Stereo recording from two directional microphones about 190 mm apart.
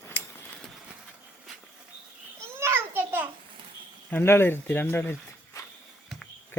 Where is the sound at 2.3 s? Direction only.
15° right (ahead or behind).